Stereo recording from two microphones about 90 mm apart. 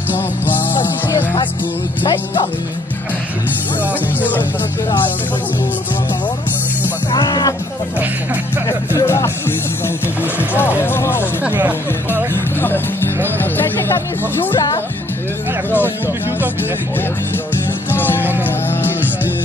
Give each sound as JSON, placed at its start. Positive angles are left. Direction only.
{"t": 0.1, "sound": "music", "side_deg": 20}
{"t": 4.2, "sound": "speech", "side_deg": 20}
{"t": 7.1, "sound": "music", "side_deg": 55}
{"t": 8.6, "sound": "music", "side_deg": 35}
{"t": 10.5, "sound": "speech", "side_deg": 25}
{"t": 11.4, "sound": "speech", "side_deg": -20}
{"t": 12.5, "sound": "speech", "side_deg": 20}
{"t": 17.9, "sound": "music", "side_deg": 25}